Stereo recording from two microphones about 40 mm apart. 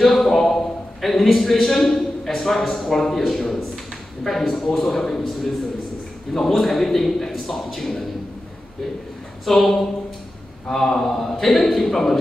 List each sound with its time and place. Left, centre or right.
0.0 s a sound: centre
2.9 s a man's voice: centre
9.5 s a man's voice: centre